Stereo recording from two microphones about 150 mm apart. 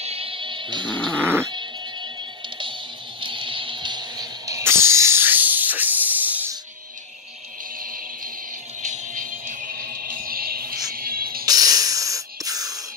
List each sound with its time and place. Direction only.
0.0 s music: 40° right (ahead or behind)
0.9 s a sound: 5° left (ahead or behind)
1.2 s dog: 15° right (ahead or behind)
3.2 s music: 35° right (ahead or behind); by 6.5 s 10° right (ahead or behind)
8.8 s music: 55° right (ahead or behind); by 11.4 s 75° right (ahead or behind)
11.4 s spray: 25° right (ahead or behind)